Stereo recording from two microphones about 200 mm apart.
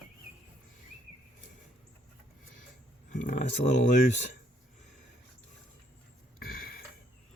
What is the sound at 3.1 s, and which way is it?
Speech, 40° left (ahead or behind).